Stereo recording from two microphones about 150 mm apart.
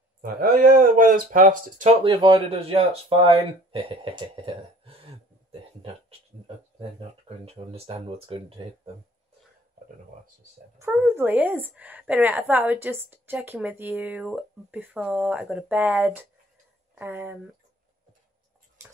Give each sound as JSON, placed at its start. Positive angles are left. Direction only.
{"t": 0.2, "sound": "speech", "side_deg": -75}
{"t": 2.0, "sound": "speech", "side_deg": -35}
{"t": 10.8, "sound": "a woman's voice", "side_deg": -15}